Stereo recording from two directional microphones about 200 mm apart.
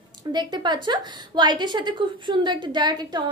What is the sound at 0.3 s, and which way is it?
A woman's voice, 20° right (ahead or behind).